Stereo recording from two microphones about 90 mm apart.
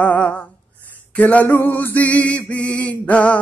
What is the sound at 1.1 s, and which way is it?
Music, 20° left (ahead or behind).